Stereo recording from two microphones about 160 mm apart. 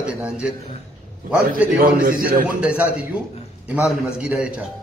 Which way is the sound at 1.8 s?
60° right (ahead or behind).